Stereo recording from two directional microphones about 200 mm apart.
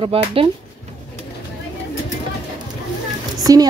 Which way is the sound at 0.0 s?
30° right (ahead or behind).